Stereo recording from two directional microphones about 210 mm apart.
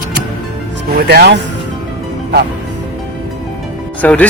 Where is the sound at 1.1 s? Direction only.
50° right (ahead or behind).